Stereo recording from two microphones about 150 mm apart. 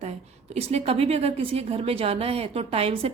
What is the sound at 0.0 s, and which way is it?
A woman's voice, 45° right (ahead or behind).